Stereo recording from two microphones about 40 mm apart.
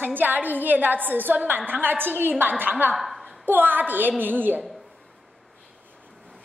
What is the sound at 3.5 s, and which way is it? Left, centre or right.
A woman's voice, right.